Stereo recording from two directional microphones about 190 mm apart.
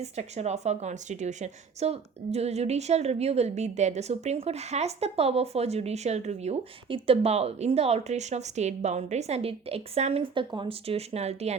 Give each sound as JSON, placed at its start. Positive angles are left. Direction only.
{"t": 0.0, "sound": "a woman's voice", "side_deg": -35}